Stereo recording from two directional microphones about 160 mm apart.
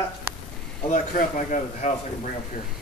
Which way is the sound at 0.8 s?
50° left (ahead or behind).